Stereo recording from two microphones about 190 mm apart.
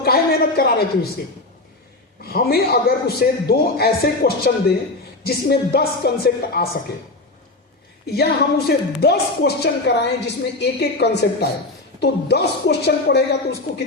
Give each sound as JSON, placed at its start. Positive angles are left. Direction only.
{"t": 0.0, "sound": "a sound", "side_deg": 55}
{"t": 2.2, "sound": "a man's voice", "side_deg": 55}
{"t": 8.0, "sound": "a man's voice", "side_deg": 55}